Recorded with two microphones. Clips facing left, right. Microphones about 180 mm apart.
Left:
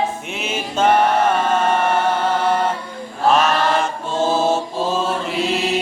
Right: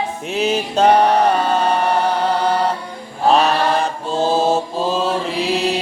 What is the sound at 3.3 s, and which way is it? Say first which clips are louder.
Mantra: right 1 dB; 35° right (ahead or behind).